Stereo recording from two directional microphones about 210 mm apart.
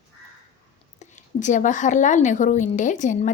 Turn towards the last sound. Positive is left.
turn(degrees=35)  # may be behind; listen again after turning